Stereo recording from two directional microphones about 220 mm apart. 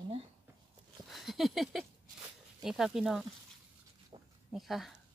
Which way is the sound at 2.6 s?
Centre (ahead or behind).